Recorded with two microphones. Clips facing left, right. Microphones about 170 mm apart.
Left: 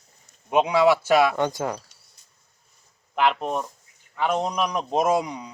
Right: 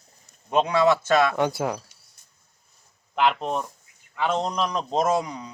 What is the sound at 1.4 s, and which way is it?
Speech, 10° right (ahead or behind).